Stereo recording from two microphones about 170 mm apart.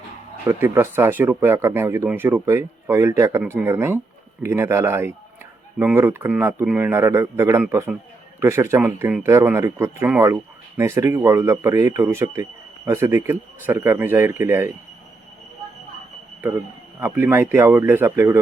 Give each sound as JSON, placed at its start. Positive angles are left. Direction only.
{"t": 0.4, "sound": "speech", "side_deg": -15}
{"t": 17.0, "sound": "speech", "side_deg": -10}